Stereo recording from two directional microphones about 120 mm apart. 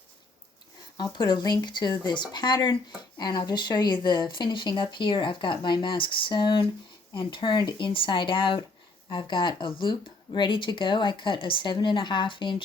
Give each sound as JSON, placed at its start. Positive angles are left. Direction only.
{"t": 0.9, "sound": "speech", "side_deg": 35}